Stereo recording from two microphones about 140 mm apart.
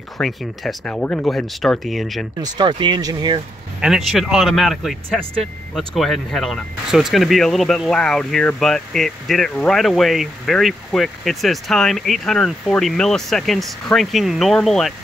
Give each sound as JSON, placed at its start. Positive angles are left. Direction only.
{"t": 0.2, "sound": "speech", "side_deg": 0}
{"t": 2.4, "sound": "speech", "side_deg": -30}
{"t": 3.8, "sound": "speech", "side_deg": 0}